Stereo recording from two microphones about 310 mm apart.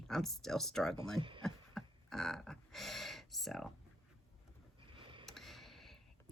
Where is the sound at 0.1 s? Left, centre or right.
Centre.